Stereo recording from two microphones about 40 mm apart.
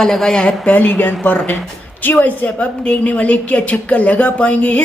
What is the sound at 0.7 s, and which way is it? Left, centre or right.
Speech, left.